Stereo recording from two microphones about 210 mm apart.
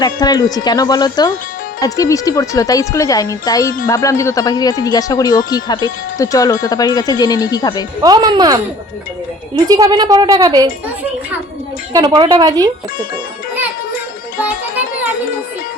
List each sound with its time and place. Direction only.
0.0 s speech: 20° left (ahead or behind)
8.0 s a woman's voice: 20° right (ahead or behind)
9.6 s a woman's voice: 20° right (ahead or behind)
11.9 s a woman's voice: 20° right (ahead or behind)